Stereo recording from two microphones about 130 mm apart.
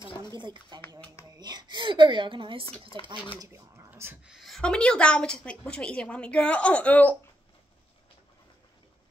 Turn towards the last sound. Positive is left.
turn(degrees=10)  # may be behind; listen again after turning